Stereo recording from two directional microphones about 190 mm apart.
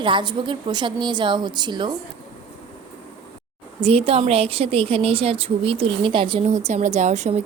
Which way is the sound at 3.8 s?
30° right (ahead or behind).